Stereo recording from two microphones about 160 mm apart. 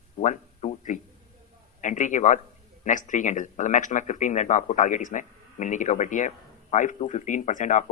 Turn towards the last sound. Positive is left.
turn(degrees=50)  # may be behind; listen again after turning